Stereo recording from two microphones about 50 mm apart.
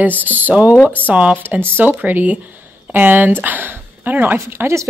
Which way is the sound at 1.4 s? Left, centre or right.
Right.